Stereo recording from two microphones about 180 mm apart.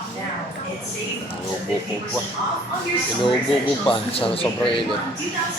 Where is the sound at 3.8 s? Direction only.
30° left (ahead or behind).